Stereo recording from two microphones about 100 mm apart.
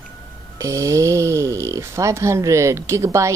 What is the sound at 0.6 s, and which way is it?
Speech, 35° right (ahead or behind).